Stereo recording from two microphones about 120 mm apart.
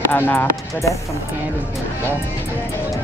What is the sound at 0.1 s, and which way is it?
Speech, 20° left (ahead or behind).